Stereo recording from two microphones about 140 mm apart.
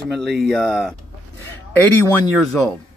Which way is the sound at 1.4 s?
15° left (ahead or behind).